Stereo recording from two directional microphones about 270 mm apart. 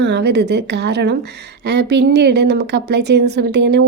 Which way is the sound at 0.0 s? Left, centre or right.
Right.